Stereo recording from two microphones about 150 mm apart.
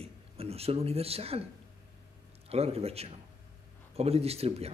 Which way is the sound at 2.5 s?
40° right (ahead or behind).